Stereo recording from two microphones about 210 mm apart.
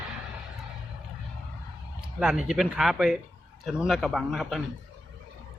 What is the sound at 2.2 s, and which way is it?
A man's voice, 5° right (ahead or behind).